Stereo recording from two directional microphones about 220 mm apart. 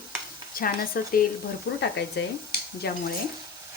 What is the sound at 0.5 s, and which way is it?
Cutlery, 40° left (ahead or behind).